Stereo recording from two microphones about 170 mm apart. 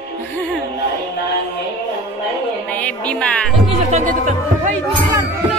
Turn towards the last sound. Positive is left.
turn(degrees=-45)  # may be behind; listen again after turning